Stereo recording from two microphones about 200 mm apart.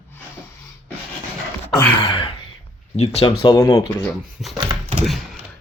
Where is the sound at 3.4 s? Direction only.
20° left (ahead or behind).